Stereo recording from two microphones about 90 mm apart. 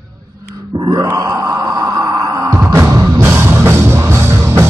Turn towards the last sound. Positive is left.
turn(degrees=-30)  # may be behind; listen again after turning